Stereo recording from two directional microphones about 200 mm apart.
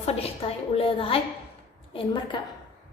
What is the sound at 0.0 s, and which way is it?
A woman's voice, 30° left (ahead or behind).